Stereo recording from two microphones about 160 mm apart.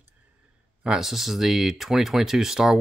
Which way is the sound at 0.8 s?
5° right (ahead or behind).